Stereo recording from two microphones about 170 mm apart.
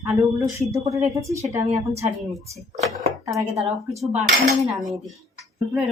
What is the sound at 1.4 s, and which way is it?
Speech, 40° right (ahead or behind).